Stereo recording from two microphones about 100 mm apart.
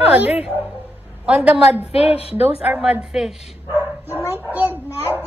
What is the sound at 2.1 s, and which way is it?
Speech, 90° left.